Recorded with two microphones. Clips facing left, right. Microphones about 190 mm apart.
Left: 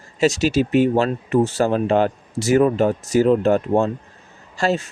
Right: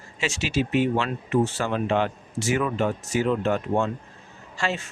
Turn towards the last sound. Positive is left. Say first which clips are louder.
# left 8 dB
turn(degrees=40)  # may be behind; listen again after turning